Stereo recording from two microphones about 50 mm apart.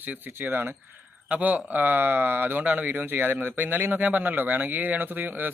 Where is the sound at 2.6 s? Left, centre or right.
Right.